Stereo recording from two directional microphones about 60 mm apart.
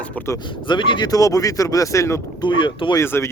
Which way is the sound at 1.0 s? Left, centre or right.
Left.